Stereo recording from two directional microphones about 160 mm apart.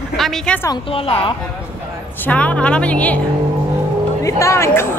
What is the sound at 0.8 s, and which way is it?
Speech, 35° left (ahead or behind).